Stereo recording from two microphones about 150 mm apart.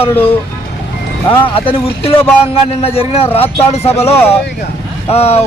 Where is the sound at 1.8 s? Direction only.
40° left (ahead or behind).